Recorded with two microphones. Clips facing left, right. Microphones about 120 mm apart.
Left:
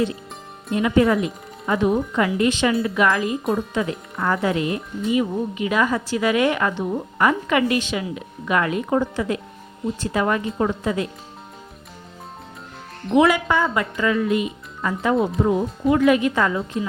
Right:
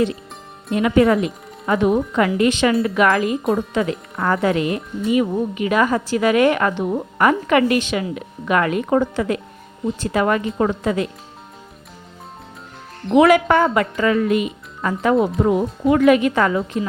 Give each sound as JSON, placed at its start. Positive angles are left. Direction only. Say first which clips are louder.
{"t": 0.8, "sound": "speech", "louder": "right 3 dB", "side_deg": -75}
{"t": 3.4, "sound": "speech", "louder": "right 3 dB", "side_deg": 0}
{"t": 3.8, "sound": "speech", "louder": "right 3 dB", "side_deg": -65}
{"t": 13.1, "sound": "speech", "louder": "right 4 dB", "side_deg": -60}